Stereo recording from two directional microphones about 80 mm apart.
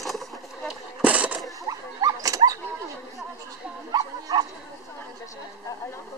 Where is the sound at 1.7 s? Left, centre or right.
Right.